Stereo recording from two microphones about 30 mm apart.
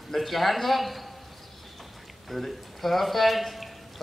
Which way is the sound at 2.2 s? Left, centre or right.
Centre.